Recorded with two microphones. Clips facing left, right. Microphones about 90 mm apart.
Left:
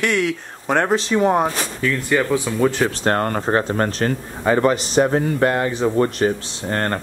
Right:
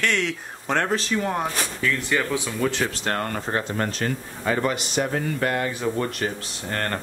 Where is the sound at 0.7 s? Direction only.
20° left (ahead or behind).